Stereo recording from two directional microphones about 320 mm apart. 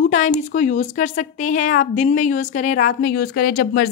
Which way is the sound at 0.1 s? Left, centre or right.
Left.